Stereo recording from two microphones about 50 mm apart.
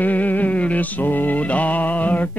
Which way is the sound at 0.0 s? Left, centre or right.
Left.